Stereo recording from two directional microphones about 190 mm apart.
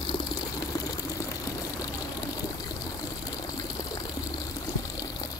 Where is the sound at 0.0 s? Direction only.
20° left (ahead or behind).